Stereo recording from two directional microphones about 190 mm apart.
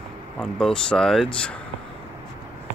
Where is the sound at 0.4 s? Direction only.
5° left (ahead or behind).